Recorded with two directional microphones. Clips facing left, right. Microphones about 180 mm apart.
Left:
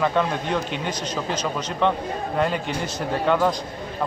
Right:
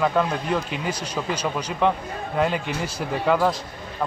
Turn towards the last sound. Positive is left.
turn(degrees=-5)  # may be behind; listen again after turning